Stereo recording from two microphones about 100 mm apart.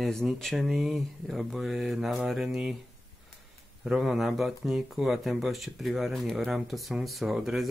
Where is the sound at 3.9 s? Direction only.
5° right (ahead or behind).